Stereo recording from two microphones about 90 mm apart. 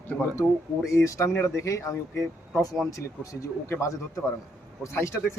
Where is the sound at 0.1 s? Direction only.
15° left (ahead or behind).